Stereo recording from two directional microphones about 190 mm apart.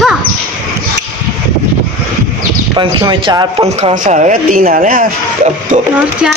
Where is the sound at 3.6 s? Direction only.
40° right (ahead or behind).